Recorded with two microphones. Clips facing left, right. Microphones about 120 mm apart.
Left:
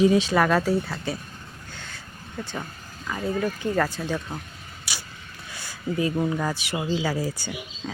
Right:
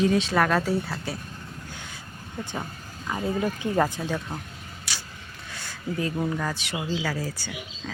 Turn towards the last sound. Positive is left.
turn(degrees=15)  # may be behind; listen again after turning